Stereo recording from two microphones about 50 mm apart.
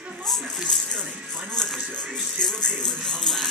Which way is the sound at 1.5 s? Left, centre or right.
Centre.